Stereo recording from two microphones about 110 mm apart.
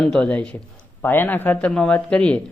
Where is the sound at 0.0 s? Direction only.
10° left (ahead or behind).